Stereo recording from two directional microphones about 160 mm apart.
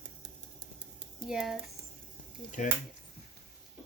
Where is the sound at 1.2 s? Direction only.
Centre (ahead or behind).